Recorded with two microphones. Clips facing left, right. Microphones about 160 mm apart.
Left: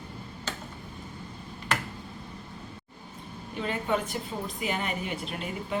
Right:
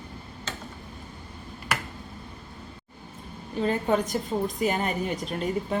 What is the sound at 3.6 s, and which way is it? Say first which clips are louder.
A woman's voice: right 5 dB; 40° right (ahead or behind).